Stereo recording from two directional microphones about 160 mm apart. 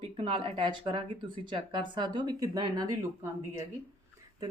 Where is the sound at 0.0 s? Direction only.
35° right (ahead or behind).